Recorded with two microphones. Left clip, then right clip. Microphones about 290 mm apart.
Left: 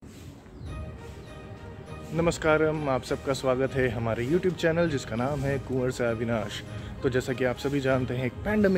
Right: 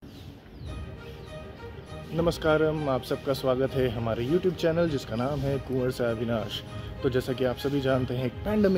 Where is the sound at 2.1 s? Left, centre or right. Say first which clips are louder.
Even; centre.